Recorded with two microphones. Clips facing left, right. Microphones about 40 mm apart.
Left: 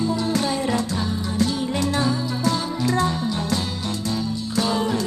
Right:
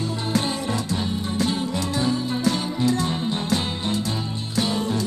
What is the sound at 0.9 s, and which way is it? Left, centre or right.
Music, right.